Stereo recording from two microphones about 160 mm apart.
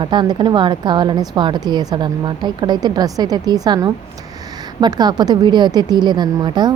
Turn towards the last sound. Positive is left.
turn(degrees=-25)  # may be behind; listen again after turning